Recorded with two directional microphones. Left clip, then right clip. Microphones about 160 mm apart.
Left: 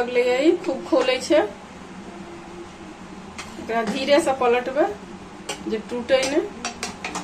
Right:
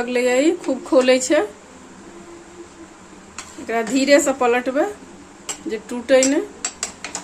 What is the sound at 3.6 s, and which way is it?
A woman's voice, 75° right (ahead or behind).